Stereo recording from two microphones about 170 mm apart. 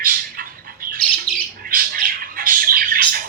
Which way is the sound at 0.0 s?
55° right (ahead or behind).